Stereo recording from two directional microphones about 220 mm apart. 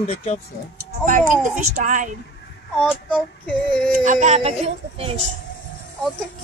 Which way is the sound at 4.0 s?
35° right (ahead or behind).